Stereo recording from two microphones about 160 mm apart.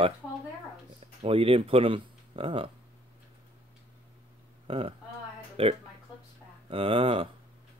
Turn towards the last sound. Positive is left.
turn(degrees=-35)  # may be behind; listen again after turning